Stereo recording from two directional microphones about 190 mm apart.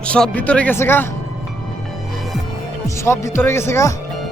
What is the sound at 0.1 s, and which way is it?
Speech, 5° left (ahead or behind).